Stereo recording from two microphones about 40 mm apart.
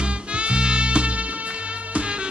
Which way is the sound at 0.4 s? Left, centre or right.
Right.